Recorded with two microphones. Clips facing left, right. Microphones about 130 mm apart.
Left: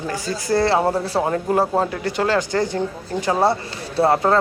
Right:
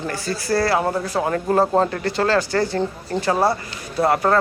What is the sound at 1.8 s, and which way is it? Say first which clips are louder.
Speech: right 1 dB; 10° left (ahead or behind).